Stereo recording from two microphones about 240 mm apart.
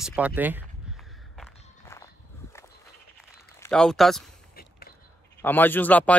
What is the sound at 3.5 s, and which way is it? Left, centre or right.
Speech, centre.